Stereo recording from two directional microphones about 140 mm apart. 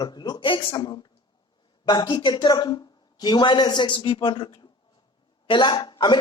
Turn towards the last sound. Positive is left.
turn(degrees=35)  # may be behind; listen again after turning